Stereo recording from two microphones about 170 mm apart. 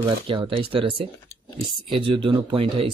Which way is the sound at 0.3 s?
30° right (ahead or behind).